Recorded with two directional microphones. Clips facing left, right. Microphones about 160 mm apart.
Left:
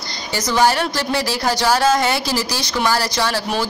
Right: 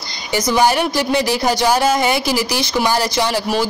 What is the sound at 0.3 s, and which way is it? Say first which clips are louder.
Speech: right 2 dB; 10° right (ahead or behind).